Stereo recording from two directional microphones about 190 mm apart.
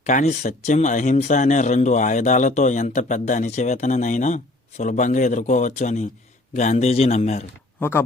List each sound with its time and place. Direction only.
0.0 s a man's voice: 40° left (ahead or behind)
7.8 s speech: 10° left (ahead or behind)